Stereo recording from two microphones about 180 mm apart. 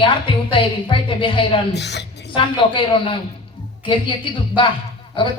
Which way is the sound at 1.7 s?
70° left (ahead or behind).